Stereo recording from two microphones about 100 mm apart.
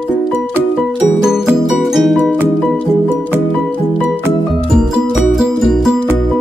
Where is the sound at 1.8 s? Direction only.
Centre (ahead or behind).